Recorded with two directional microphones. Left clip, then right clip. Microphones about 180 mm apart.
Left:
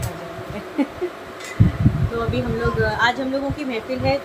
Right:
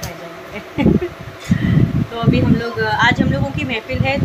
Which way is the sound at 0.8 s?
10° right (ahead or behind).